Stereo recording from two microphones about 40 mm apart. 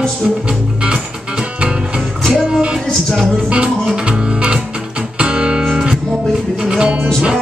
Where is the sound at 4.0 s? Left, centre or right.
Right.